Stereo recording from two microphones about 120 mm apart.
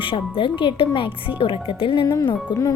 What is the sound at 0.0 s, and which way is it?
A woman's voice, 45° left (ahead or behind).